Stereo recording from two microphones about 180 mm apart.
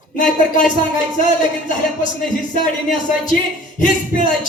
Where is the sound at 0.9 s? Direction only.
45° left (ahead or behind).